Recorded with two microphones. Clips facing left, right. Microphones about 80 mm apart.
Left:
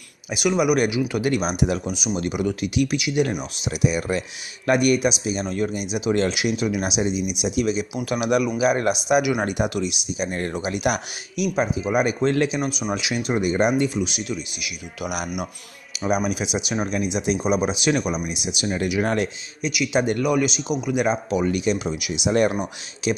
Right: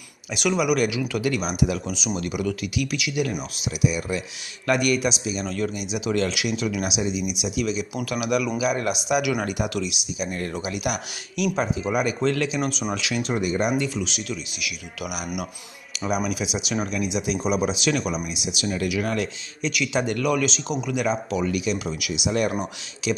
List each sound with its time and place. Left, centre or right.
0.3 s speech: centre; by 4.2 s left
4.6 s speech: left
11.3 s speech: centre
13.9 s speech: centre
19.6 s a man's voice: centre; by 23.2 s left